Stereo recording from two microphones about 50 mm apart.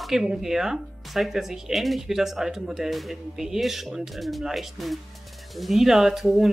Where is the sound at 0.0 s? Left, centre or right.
Centre.